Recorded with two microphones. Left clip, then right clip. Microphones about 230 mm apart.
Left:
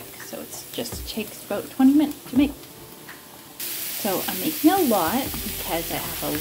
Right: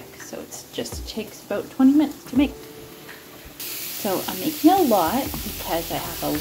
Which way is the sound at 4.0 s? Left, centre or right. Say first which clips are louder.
Right 1 dB; centre.